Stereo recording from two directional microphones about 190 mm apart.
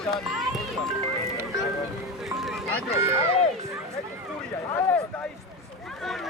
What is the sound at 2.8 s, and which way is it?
Speech, 15° right (ahead or behind).